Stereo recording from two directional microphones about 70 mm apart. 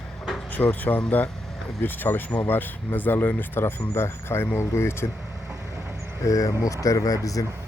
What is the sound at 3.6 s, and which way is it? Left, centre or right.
Speech, left.